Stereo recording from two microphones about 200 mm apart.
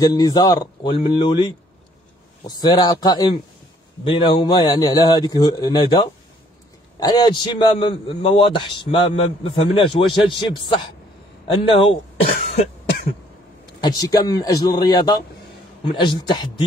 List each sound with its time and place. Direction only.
0.0 s a man's voice: 20° left (ahead or behind)
13.7 s a man's voice: 20° left (ahead or behind)